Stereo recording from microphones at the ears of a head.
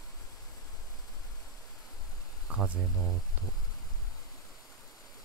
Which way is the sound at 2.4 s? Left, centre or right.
Right.